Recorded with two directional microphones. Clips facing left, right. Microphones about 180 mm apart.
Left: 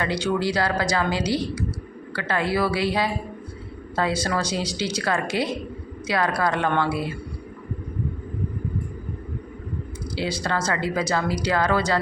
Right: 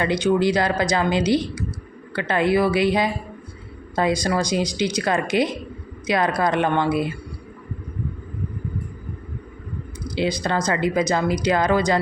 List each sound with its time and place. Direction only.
0.0 s a woman's voice: 15° right (ahead or behind)
10.2 s speech: 20° right (ahead or behind)